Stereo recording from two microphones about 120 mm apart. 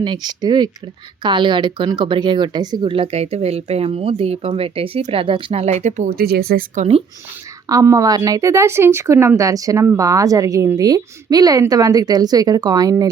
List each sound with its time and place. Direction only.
0.0 s a woman's voice: 35° right (ahead or behind)
5.5 s speech: 65° right (ahead or behind)
6.7 s speech: 55° right (ahead or behind)
7.7 s a woman's voice: 30° right (ahead or behind)